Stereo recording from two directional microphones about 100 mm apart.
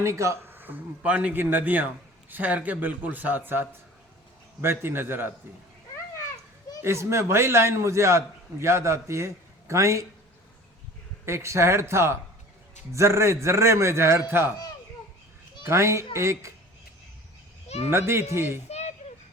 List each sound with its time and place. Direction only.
0.0 s a man's voice: 30° right (ahead or behind)
6.8 s a man's voice: 25° right (ahead or behind)
11.3 s a man's voice: 25° right (ahead or behind)
15.6 s a man's voice: 30° right (ahead or behind)
17.7 s speech: 90° left
17.9 s a man's voice: 25° right (ahead or behind)
18.7 s a sound: 90° left